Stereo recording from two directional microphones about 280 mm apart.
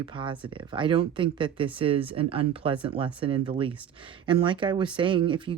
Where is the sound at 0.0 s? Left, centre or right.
Centre.